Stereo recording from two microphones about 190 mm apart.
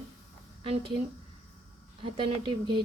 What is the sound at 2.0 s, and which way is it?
Speech, 25° right (ahead or behind).